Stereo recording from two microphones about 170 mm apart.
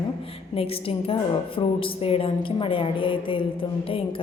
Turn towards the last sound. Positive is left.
turn(degrees=30)  # may be behind; listen again after turning